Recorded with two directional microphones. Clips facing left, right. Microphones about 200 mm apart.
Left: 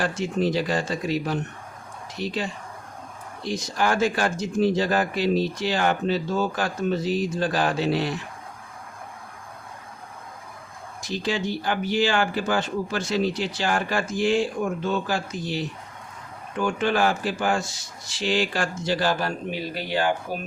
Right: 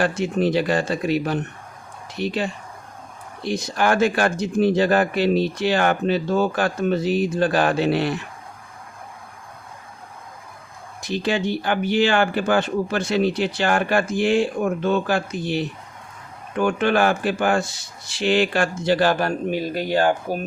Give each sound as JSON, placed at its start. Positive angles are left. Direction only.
{"t": 0.0, "sound": "speech", "side_deg": -60}
{"t": 11.0, "sound": "speech", "side_deg": -60}